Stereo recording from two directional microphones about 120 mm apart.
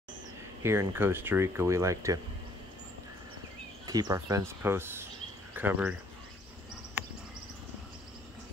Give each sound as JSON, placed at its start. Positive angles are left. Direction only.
{"t": 0.6, "sound": "speech", "side_deg": -20}
{"t": 3.8, "sound": "speech", "side_deg": -30}
{"t": 7.0, "sound": "a sound", "side_deg": -15}